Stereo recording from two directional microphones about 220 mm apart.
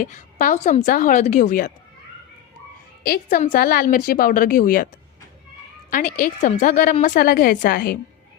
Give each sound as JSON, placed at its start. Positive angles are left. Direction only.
{"t": 0.0, "sound": "a woman's voice", "side_deg": 35}
{"t": 3.0, "sound": "a woman's voice", "side_deg": 40}
{"t": 5.9, "sound": "a woman's voice", "side_deg": 35}